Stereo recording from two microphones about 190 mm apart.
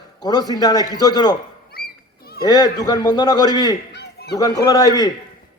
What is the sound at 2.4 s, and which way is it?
A man's voice, 20° left (ahead or behind).